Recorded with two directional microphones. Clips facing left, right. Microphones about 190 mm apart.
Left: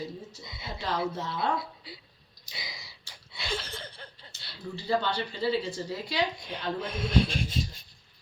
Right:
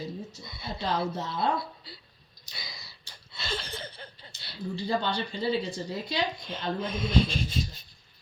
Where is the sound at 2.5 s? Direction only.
15° left (ahead or behind).